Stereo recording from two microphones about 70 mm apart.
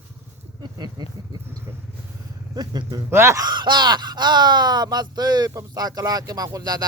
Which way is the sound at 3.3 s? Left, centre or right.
Right.